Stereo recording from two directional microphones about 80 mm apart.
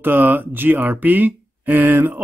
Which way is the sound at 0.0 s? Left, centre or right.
Right.